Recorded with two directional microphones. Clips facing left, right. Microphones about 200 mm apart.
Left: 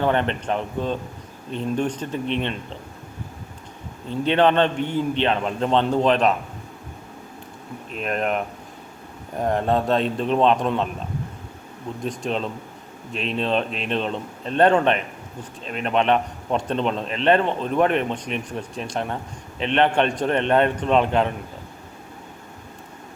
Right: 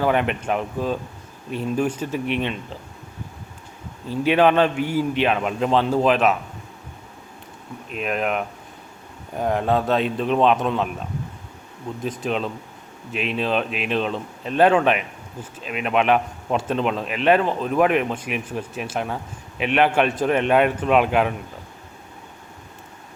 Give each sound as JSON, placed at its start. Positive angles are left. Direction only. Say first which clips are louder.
{"t": 0.0, "sound": "a man's voice", "louder": "right 1 dB", "side_deg": -10}
{"t": 4.1, "sound": "a man's voice", "louder": "right 1 dB", "side_deg": -5}
{"t": 7.9, "sound": "speech", "louder": "even", "side_deg": -5}
{"t": 11.9, "sound": "speech", "louder": "right 1 dB", "side_deg": 0}